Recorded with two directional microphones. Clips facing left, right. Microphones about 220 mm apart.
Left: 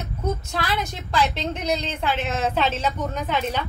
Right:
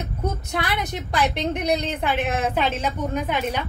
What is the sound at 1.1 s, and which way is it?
A woman's voice, 20° right (ahead or behind).